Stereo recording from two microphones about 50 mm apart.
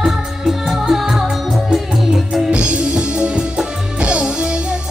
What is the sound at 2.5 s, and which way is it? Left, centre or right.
Music, right.